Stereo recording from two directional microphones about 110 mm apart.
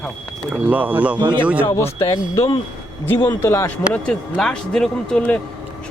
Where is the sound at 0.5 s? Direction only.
15° right (ahead or behind).